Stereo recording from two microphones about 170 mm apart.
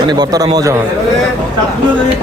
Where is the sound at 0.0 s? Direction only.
25° right (ahead or behind).